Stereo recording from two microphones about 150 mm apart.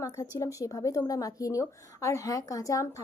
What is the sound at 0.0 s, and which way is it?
A woman's voice, 20° left (ahead or behind).